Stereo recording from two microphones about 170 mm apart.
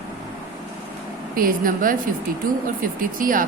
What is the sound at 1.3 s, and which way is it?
Speech, 55° right (ahead or behind).